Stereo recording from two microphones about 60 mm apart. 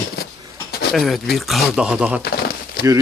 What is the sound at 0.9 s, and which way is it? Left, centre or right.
Speech, centre.